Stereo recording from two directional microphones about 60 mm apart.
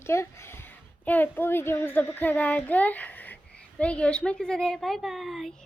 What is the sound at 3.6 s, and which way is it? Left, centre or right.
A child's voice, centre.